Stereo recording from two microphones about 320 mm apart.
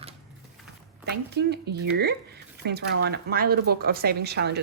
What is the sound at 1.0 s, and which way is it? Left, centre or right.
A woman's voice, right.